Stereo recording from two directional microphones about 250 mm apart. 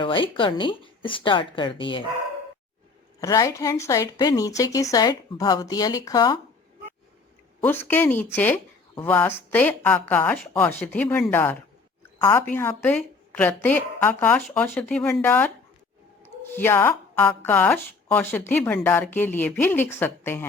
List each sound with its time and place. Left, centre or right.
0.0 s speech: centre
3.2 s speech: centre
7.6 s speech: centre